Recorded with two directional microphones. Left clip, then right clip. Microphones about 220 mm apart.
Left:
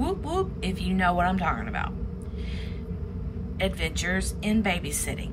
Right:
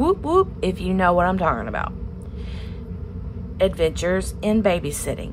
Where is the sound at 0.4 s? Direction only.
20° right (ahead or behind).